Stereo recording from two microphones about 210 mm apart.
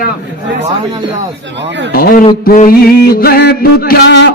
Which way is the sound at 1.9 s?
45° left (ahead or behind).